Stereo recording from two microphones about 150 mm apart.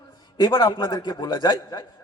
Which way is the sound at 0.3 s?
30° left (ahead or behind).